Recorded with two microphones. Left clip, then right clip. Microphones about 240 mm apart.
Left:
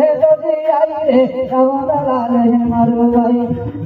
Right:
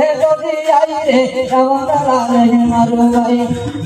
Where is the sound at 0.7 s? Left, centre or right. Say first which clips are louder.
Right 3 dB; right.